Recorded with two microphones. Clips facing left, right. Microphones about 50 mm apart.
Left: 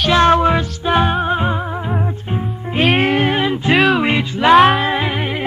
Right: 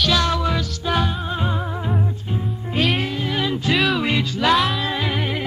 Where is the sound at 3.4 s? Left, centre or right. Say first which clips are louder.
Left 5 dB; left.